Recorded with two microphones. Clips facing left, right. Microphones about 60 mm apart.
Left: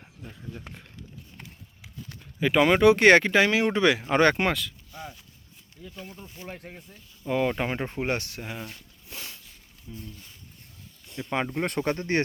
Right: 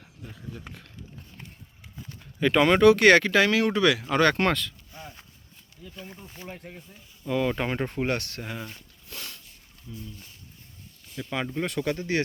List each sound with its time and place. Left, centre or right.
0.2 s speech: centre
2.4 s speech: centre
2.9 s speech: left
4.4 s speech: centre
6.4 s speech: left
8.4 s speech: centre
9.0 s a sound: centre
9.9 s speech: centre
11.3 s speech: left
11.6 s speech: left